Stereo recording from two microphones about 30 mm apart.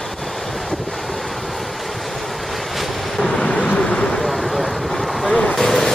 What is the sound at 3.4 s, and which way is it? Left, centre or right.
Vehicle, left.